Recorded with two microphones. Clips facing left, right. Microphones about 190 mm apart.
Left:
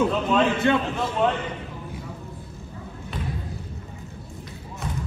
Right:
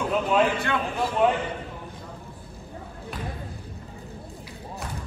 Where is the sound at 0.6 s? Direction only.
20° left (ahead or behind).